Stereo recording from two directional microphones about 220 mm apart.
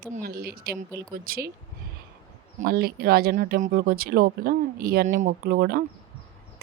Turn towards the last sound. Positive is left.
turn(degrees=-45)  # may be behind; listen again after turning